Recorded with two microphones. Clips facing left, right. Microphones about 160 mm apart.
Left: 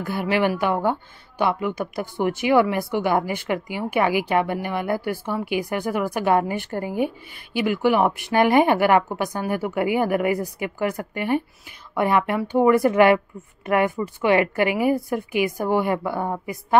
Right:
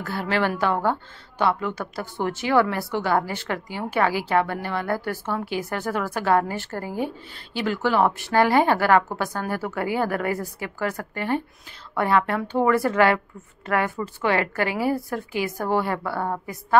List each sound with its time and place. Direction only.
0.0 s a woman's voice: 15° left (ahead or behind)